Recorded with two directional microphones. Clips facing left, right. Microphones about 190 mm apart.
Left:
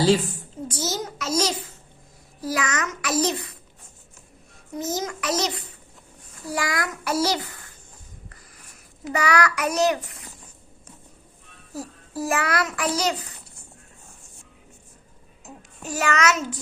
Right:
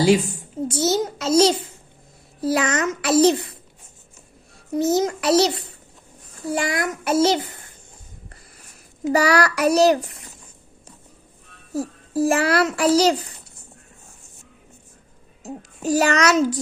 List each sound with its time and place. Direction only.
0.0 s a woman's voice: 15° right (ahead or behind)
0.7 s a child's voice: 25° right (ahead or behind)
4.8 s a child's voice: 30° right (ahead or behind)
9.1 s a child's voice: 35° right (ahead or behind)
11.7 s a child's voice: 25° right (ahead or behind)
15.4 s a child's voice: 35° right (ahead or behind)